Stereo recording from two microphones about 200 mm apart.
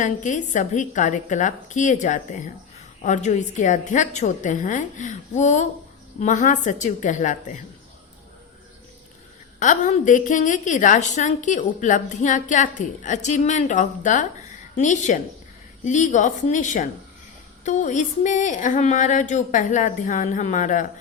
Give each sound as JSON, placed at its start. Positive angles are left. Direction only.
{"t": 0.0, "sound": "a woman's voice", "side_deg": 40}
{"t": 9.6, "sound": "a woman's voice", "side_deg": 40}